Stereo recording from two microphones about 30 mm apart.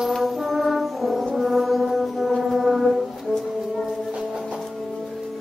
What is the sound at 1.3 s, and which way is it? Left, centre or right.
Music, centre.